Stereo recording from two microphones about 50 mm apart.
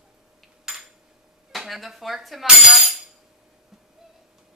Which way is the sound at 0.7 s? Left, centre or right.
Centre.